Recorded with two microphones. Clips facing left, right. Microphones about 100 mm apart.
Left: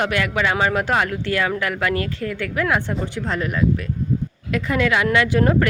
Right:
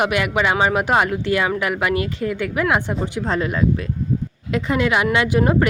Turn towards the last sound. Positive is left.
turn(degrees=-20)  # may be behind; listen again after turning